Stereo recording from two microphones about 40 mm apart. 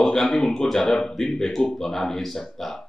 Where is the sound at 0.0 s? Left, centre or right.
Centre.